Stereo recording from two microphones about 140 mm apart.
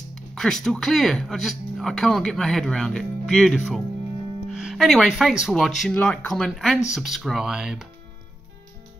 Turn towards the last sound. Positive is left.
turn(degrees=-5)  # may be behind; listen again after turning